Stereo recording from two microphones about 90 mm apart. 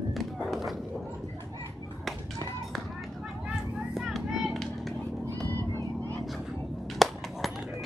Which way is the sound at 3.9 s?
5° right (ahead or behind).